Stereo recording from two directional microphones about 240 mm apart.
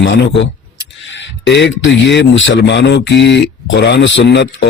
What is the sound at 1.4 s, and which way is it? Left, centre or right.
Speech, left.